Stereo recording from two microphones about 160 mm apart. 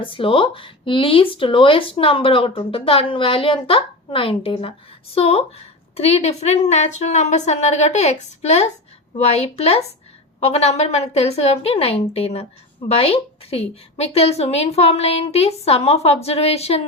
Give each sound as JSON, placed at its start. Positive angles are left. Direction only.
{"t": 0.0, "sound": "a woman's voice", "side_deg": 35}